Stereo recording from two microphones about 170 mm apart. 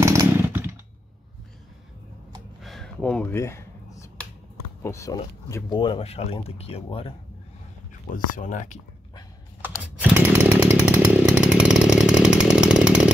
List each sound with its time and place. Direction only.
0.0 s chainsaw: 15° right (ahead or behind)
2.6 s a sound: centre (ahead or behind)
4.8 s speech: 20° left (ahead or behind); by 7.2 s 35° left (ahead or behind)
8.1 s speech: 50° left (ahead or behind)
9.6 s chainsaw: 10° right (ahead or behind)